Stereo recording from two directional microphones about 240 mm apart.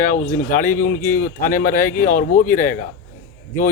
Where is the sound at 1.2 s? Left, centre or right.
Left.